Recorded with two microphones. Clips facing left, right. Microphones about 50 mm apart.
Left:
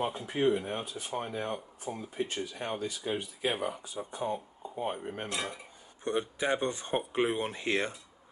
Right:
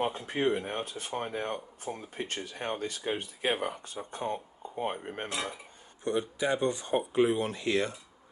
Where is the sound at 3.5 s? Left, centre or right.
Right.